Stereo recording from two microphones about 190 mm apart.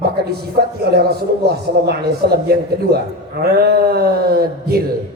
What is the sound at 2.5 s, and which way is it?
A man's voice, 55° right (ahead or behind).